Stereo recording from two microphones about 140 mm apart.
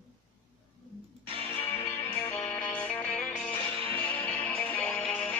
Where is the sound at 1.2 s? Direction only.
40° right (ahead or behind).